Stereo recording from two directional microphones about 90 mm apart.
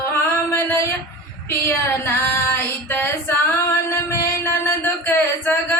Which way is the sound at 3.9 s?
30° left (ahead or behind).